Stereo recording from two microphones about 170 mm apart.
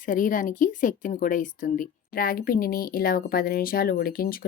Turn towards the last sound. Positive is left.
turn(degrees=55)  # may be behind; listen again after turning